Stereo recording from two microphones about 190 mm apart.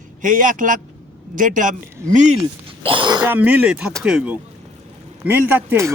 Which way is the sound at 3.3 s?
10° right (ahead or behind).